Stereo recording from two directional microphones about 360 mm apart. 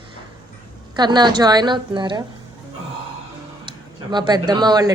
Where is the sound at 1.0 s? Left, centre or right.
Centre.